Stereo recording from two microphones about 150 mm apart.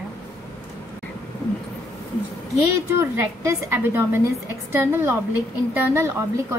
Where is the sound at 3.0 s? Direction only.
20° right (ahead or behind).